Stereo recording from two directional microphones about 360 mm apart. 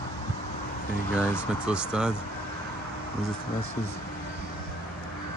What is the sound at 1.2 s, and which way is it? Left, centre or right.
Speech, centre.